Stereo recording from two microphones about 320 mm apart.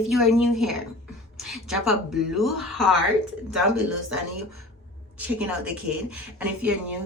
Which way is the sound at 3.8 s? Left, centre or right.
Right.